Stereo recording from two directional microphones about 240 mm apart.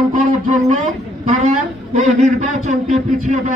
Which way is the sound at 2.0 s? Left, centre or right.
Right.